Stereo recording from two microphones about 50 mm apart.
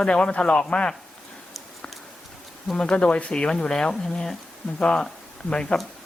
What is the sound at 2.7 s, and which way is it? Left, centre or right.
Speech, left.